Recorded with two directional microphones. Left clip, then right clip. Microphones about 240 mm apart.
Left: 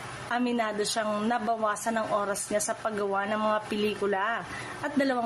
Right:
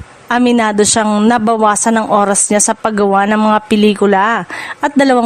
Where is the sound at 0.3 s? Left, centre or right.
Right.